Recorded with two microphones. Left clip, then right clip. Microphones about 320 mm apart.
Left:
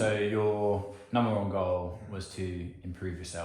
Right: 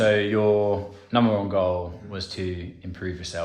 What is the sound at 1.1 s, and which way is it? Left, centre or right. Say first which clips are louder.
Speech: right 7 dB; right.